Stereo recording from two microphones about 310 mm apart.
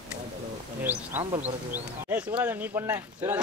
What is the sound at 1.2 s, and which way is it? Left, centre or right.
Speech, centre.